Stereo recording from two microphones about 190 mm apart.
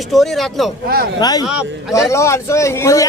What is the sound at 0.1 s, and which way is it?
Speech, centre (ahead or behind).